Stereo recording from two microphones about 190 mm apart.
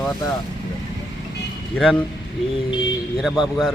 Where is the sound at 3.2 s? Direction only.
Centre (ahead or behind).